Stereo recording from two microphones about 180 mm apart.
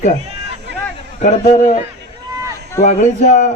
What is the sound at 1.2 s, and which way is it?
Speech, 45° left (ahead or behind).